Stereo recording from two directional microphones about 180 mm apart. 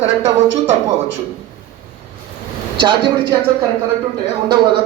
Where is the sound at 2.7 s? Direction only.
25° right (ahead or behind).